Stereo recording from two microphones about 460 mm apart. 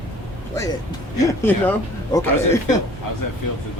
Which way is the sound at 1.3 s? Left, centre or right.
Centre.